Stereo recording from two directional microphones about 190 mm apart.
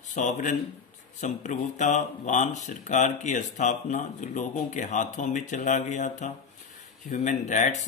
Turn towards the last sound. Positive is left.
turn(degrees=40)  # may be behind; listen again after turning